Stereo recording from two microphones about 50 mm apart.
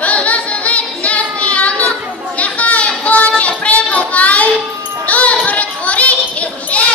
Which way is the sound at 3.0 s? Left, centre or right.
Left.